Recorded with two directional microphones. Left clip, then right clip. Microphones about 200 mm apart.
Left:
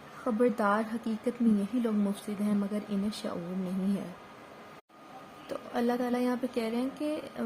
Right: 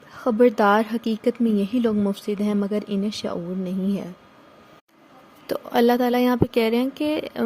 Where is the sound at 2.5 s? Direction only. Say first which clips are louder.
Right 6 dB; 40° right (ahead or behind).